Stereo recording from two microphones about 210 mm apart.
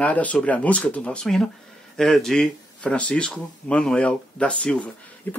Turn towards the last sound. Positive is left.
turn(degrees=5)  # may be behind; listen again after turning